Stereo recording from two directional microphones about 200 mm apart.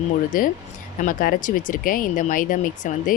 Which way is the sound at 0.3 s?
45° left (ahead or behind).